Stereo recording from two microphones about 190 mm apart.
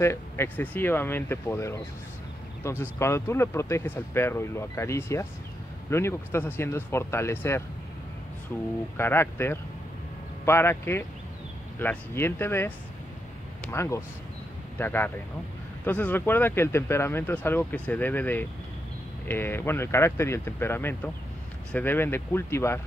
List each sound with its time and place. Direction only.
0.0 s speech: 15° left (ahead or behind)
8.9 s speech: 10° left (ahead or behind)